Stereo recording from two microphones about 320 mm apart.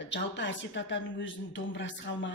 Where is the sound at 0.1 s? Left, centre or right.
Left.